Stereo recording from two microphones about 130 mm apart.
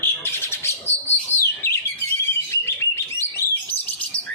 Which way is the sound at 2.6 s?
20° left (ahead or behind).